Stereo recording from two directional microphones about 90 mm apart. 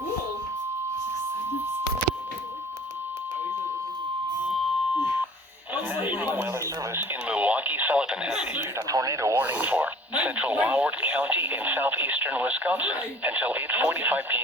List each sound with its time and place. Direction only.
5.7 s radio: 20° right (ahead or behind)
8.9 s radio: 40° right (ahead or behind)
9.4 s radio: 20° right (ahead or behind)